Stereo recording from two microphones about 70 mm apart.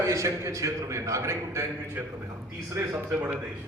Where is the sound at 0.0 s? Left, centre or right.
Right.